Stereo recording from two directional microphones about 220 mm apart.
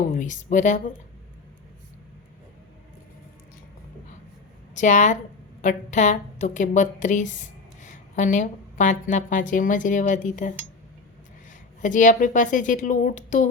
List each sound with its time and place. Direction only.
0.1 s a woman's voice: 35° left (ahead or behind)
4.7 s a woman's voice: 35° left (ahead or behind)
11.8 s a woman's voice: 35° left (ahead or behind)